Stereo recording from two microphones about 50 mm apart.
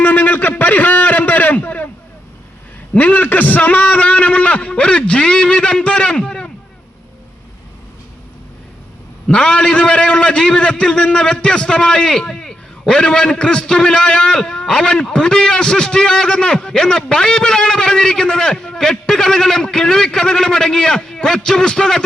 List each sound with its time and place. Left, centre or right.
0.0 s a sound: left
2.9 s a man's voice: left; by 6.5 s centre
9.2 s a man's voice: left